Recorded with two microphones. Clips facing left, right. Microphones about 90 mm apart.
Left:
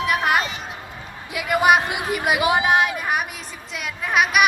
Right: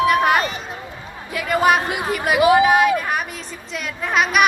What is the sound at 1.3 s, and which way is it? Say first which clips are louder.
Speech: even; 15° left (ahead or behind).